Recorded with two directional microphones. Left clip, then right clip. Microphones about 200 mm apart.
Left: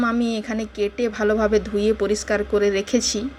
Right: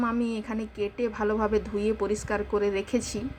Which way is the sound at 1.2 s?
20° left (ahead or behind).